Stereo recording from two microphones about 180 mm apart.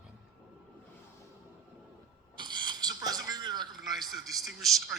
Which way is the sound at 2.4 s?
25° right (ahead or behind).